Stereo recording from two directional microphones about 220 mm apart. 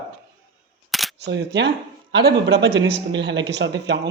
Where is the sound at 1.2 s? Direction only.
55° right (ahead or behind).